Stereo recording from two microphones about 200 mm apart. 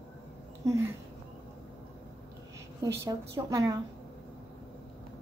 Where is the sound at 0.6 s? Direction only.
15° right (ahead or behind).